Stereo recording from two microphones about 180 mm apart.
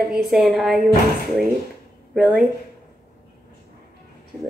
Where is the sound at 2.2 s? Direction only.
5° right (ahead or behind).